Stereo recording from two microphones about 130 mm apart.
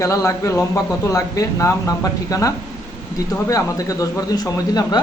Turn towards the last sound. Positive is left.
turn(degrees=30)  # may be behind; listen again after turning